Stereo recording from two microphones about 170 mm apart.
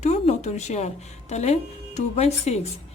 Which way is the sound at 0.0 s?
40° left (ahead or behind).